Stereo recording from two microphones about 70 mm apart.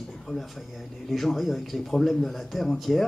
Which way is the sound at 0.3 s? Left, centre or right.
Centre.